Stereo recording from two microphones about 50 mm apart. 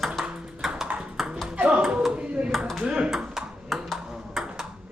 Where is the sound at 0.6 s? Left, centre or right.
Centre.